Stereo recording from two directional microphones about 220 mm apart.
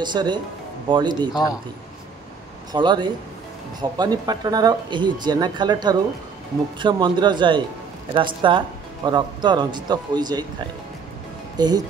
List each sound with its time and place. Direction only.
0.0 s speech: 20° right (ahead or behind)
2.7 s speech: 20° right (ahead or behind)
11.5 s speech: 20° right (ahead or behind)